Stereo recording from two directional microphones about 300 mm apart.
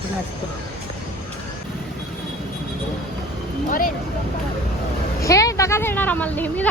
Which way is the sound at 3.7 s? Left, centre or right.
Left.